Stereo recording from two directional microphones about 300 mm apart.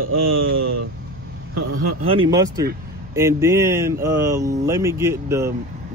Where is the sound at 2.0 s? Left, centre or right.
Centre.